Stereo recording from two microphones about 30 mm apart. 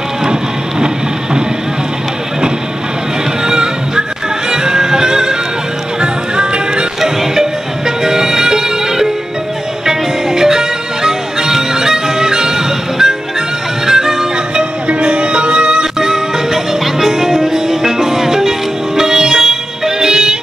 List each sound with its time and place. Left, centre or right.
0.2 s a sound: right
3.4 s music: right
5.9 s music: right
7.0 s music: centre
14.5 s music: right; by 18.5 s centre
18.9 s sitar: centre
20.0 s music: right